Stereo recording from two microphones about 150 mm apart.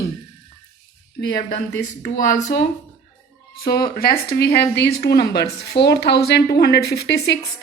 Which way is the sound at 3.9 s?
85° left.